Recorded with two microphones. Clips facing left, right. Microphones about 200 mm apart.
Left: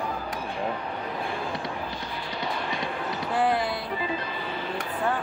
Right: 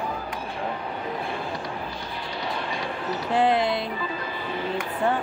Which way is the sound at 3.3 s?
20° right (ahead or behind).